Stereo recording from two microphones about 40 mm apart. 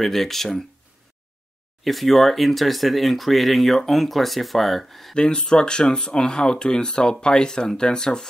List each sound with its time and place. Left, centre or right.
0.0 s speech: centre
1.9 s speech: centre
5.1 s speech: left